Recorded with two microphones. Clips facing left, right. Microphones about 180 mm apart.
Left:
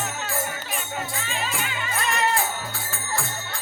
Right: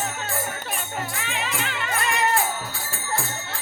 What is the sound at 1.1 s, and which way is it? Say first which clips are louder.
Music: even; 65° right (ahead or behind).